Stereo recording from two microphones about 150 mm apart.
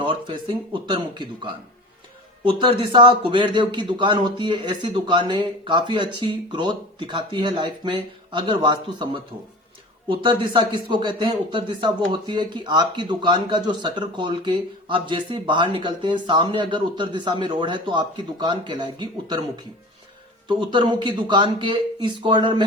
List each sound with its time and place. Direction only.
0.0 s a man's voice: 35° right (ahead or behind)
10.1 s a man's voice: 35° right (ahead or behind)
20.5 s a man's voice: 30° right (ahead or behind)